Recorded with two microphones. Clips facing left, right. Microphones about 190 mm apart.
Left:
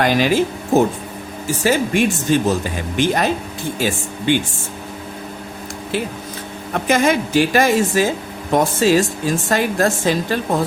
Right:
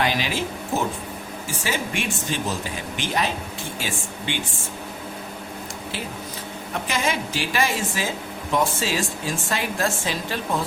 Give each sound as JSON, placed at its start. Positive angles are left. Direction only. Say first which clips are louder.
{"t": 0.0, "sound": "speech", "louder": "left 9 dB", "side_deg": 45}
{"t": 6.7, "sound": "speech", "louder": "left 10 dB", "side_deg": 50}